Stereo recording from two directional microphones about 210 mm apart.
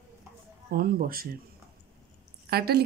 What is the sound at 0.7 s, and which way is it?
Speech, 45° right (ahead or behind).